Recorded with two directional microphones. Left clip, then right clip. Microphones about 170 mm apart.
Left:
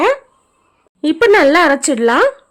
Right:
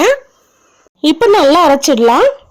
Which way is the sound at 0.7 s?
15° right (ahead or behind).